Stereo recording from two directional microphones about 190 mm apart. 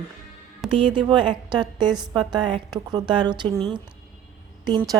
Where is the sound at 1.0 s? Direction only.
25° right (ahead or behind).